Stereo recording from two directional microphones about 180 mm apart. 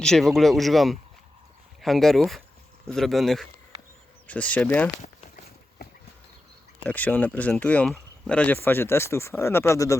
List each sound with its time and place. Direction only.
0.0 s speech: centre (ahead or behind)
5.8 s a sound: 60° left (ahead or behind)
6.8 s speech: 10° left (ahead or behind)